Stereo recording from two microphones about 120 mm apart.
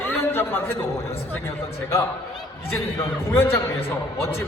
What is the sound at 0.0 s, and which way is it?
A man's voice, 20° left (ahead or behind).